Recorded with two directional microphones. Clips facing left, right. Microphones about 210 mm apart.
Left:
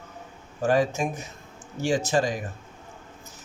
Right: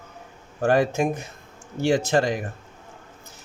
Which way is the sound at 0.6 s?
60° right (ahead or behind).